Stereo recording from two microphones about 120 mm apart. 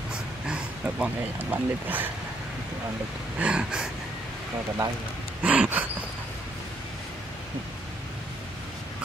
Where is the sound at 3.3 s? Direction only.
10° right (ahead or behind).